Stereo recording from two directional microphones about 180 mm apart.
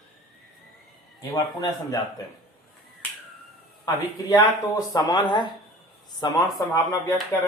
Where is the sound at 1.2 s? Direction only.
20° left (ahead or behind).